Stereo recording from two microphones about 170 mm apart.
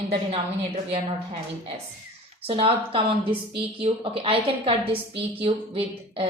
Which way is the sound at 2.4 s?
35° right (ahead or behind).